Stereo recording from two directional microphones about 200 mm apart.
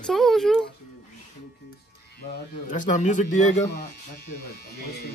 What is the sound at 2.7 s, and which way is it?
Speech, 35° left (ahead or behind).